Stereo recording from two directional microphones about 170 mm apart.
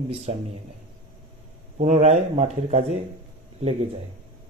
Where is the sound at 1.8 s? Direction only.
40° right (ahead or behind).